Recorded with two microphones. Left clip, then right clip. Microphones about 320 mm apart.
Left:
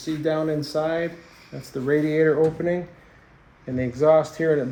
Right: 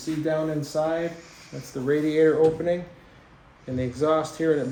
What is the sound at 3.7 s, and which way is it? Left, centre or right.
Speech, left.